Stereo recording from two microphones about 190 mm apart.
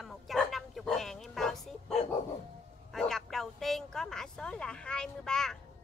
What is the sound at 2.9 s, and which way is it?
Speech, centre (ahead or behind).